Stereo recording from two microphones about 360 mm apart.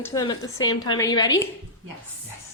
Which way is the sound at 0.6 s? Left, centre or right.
Left.